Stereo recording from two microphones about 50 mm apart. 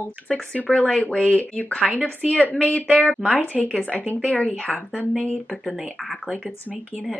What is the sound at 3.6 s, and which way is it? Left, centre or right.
Speech, left.